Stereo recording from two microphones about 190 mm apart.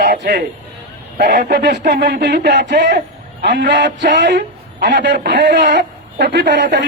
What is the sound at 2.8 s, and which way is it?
Speech, 40° right (ahead or behind).